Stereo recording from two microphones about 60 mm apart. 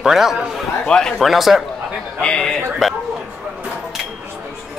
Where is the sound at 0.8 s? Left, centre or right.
Centre.